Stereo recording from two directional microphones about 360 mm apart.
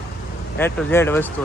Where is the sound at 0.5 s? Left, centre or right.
Centre.